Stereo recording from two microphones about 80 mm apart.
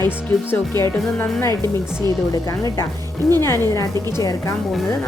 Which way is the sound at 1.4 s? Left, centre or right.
Left.